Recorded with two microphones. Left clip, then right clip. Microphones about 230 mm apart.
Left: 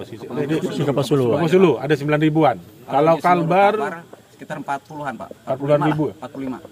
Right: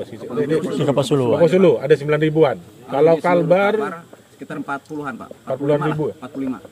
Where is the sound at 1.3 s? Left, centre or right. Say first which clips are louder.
Right 4 dB; left.